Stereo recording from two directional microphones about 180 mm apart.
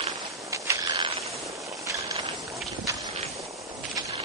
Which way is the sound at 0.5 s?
15° right (ahead or behind).